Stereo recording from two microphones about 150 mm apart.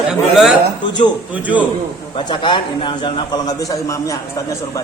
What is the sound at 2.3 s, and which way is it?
A man's voice, 30° left (ahead or behind).